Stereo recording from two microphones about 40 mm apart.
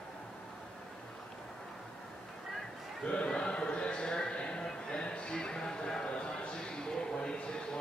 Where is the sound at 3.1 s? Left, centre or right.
Left.